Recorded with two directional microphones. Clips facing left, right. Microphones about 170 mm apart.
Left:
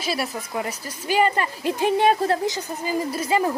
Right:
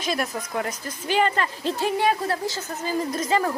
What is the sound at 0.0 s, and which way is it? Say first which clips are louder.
Speech: even; 5° left (ahead or behind).